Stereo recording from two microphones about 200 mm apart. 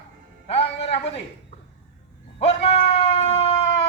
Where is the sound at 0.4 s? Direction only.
30° left (ahead or behind).